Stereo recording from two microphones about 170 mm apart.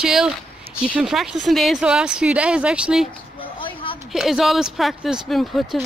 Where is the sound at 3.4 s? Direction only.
30° left (ahead or behind).